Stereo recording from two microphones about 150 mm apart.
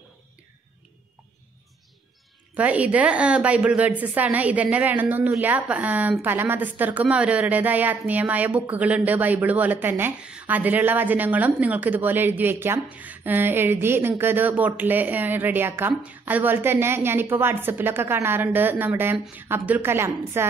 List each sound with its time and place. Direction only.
2.5 s a woman's voice: 10° right (ahead or behind)